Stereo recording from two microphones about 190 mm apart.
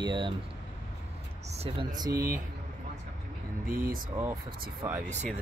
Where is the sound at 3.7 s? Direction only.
50° right (ahead or behind).